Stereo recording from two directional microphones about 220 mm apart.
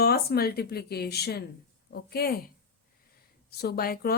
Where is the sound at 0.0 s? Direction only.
45° left (ahead or behind).